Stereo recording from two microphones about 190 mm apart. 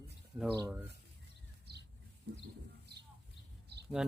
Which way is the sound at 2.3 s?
65° right (ahead or behind).